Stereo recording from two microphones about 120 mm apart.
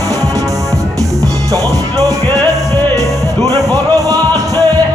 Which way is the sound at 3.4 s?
30° right (ahead or behind).